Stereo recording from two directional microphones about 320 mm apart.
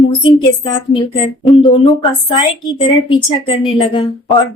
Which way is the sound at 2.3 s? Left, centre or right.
Centre.